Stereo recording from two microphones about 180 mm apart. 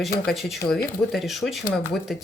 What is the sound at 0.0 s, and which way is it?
Speech, centre (ahead or behind).